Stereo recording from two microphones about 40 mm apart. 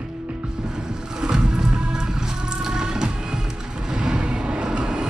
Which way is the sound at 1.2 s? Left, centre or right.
Centre.